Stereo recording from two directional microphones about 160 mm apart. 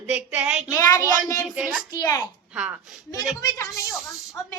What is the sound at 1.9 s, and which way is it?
Speech, 25° left (ahead or behind).